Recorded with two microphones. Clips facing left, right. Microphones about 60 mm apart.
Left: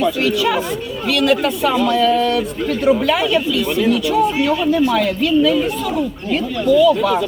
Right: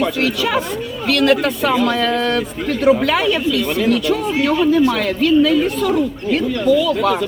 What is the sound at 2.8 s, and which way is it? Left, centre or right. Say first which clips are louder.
A man's voice: right 2 dB; right.